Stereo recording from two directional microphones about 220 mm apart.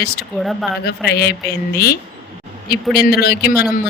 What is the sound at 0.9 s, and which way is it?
Speech, 45° left (ahead or behind).